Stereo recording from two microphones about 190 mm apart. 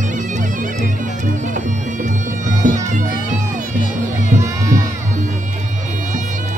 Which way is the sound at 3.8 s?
45° left (ahead or behind).